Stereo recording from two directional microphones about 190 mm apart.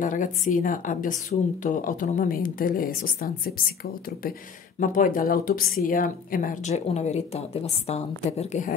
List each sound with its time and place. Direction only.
0.0 s speech: 45° left (ahead or behind)
4.7 s a woman's voice: 45° left (ahead or behind)